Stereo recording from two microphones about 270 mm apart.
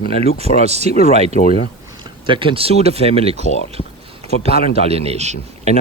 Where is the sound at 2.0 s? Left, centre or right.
Centre.